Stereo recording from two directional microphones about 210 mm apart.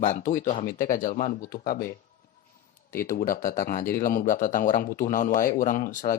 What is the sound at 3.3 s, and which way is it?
Speech, 40° left (ahead or behind).